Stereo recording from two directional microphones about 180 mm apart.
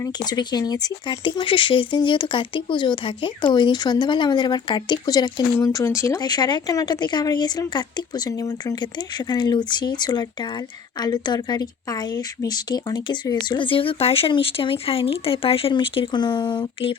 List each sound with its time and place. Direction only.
0.0 s speech: 20° left (ahead or behind)